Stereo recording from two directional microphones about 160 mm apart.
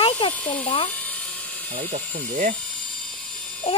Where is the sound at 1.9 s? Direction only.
50° right (ahead or behind).